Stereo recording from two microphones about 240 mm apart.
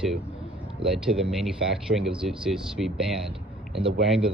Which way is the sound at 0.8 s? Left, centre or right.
Centre.